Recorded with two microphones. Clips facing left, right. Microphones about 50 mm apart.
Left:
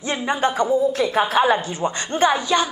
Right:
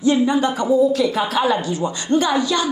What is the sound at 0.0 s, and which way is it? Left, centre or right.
Speech, left.